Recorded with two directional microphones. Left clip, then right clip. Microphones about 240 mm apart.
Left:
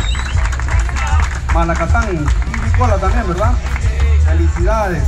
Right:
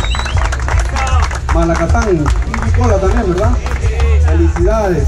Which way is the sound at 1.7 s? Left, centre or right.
Centre.